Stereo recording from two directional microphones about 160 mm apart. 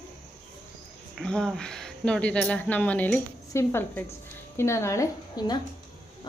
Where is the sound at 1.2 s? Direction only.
5° left (ahead or behind).